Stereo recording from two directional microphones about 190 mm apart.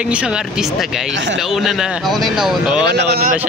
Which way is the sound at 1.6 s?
Centre (ahead or behind).